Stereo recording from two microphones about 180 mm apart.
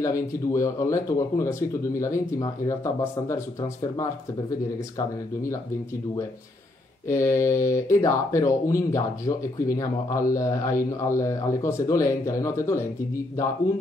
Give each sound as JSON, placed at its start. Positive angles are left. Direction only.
{"t": 0.0, "sound": "speech", "side_deg": 15}
{"t": 4.9, "sound": "speech", "side_deg": 15}
{"t": 7.1, "sound": "speech", "side_deg": 15}